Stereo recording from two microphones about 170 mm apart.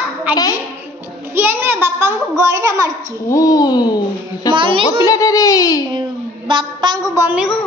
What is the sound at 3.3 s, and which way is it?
Speech, 20° left (ahead or behind).